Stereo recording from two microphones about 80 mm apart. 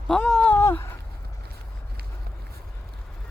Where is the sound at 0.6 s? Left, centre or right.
Left.